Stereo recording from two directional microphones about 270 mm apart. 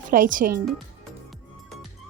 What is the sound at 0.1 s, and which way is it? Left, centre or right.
Speech, right.